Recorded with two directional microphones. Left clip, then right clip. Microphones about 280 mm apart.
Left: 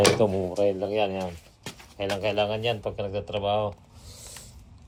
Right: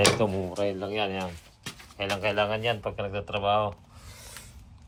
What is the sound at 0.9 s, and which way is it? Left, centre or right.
Speech, right.